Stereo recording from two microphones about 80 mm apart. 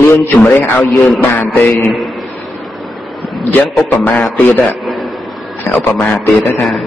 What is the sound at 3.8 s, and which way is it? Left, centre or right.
Speech, left.